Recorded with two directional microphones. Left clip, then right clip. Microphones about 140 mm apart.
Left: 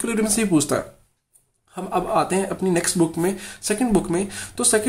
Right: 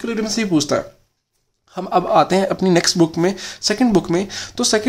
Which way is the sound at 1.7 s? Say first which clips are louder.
Right 6 dB; 35° right (ahead or behind).